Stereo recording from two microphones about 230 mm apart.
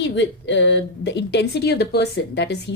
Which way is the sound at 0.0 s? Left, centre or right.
Left.